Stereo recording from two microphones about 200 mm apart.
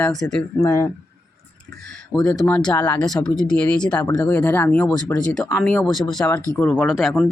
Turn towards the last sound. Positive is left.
turn(degrees=-5)  # may be behind; listen again after turning